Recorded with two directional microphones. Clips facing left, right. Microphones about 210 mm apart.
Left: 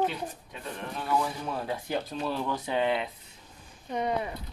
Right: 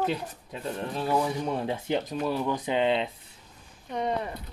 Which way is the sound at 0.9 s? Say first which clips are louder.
Right 3 dB; 30° right (ahead or behind).